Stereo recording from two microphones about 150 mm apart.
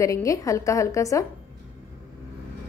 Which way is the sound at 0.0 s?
20° left (ahead or behind).